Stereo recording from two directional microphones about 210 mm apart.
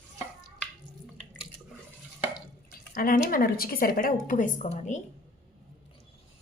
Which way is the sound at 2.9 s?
40° left (ahead or behind).